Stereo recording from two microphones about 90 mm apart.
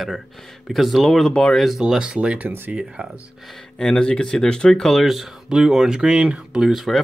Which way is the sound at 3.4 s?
5° left (ahead or behind).